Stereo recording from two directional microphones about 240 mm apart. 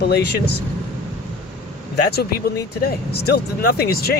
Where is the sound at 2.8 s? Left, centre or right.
Left.